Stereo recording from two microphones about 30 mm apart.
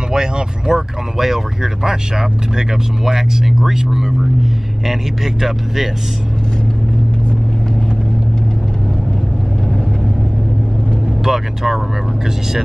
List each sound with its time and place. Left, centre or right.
0.1 s speech: right
0.7 s speech: centre
11.2 s speech: centre